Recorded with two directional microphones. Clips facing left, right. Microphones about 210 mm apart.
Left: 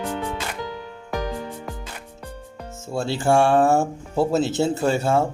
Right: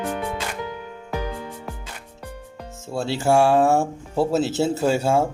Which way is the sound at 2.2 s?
5° right (ahead or behind).